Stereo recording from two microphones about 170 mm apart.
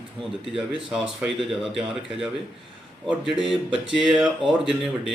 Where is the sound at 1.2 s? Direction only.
Centre (ahead or behind).